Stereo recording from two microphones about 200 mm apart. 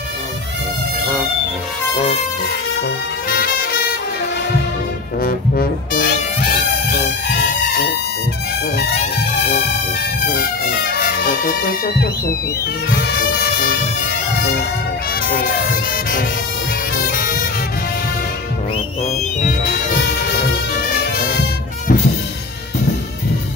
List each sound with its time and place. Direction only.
3.3 s music: 50° left (ahead or behind)
5.2 s music: 50° left (ahead or behind)
10.2 s music: 50° left (ahead or behind)
15.2 s speech: 45° left (ahead or behind)
16.9 s music: 50° left (ahead or behind)
21.0 s music: 50° left (ahead or behind)